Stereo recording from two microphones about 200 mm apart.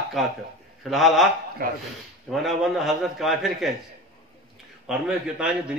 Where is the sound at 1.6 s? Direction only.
45° right (ahead or behind).